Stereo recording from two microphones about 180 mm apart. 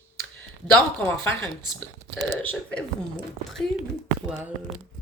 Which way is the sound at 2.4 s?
5° left (ahead or behind).